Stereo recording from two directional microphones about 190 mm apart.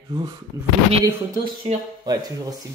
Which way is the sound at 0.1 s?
20° right (ahead or behind).